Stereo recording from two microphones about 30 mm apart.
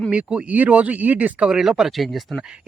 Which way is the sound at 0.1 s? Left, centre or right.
Right.